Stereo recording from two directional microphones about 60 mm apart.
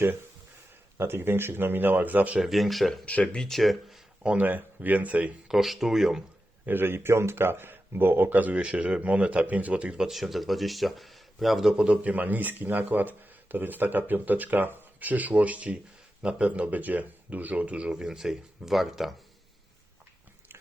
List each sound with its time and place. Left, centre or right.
0.9 s speech: right
2.4 s speech: centre
3.1 s speech: left
3.4 s speech: centre
4.4 s speech: right
5.5 s speech: centre
6.7 s speech: right; by 10.0 s centre
10.0 s speech: centre
11.7 s speech: centre
12.1 s speech: right
17.9 s speech: centre